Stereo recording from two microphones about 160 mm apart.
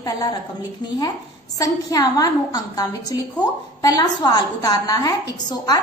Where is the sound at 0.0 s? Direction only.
25° left (ahead or behind).